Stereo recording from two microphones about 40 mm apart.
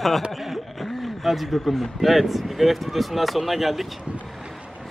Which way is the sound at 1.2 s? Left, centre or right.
Centre.